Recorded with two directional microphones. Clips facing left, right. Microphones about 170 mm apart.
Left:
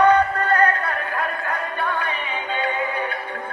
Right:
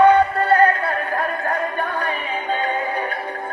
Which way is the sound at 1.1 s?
45° right (ahead or behind).